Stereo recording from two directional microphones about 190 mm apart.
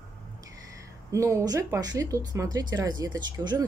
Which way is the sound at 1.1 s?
15° right (ahead or behind).